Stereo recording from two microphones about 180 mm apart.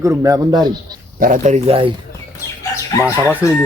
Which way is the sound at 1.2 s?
40° right (ahead or behind).